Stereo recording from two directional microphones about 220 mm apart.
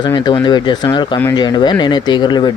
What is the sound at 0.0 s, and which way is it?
Speech, 20° left (ahead or behind).